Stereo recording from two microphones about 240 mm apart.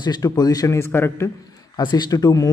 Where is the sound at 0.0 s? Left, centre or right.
Centre.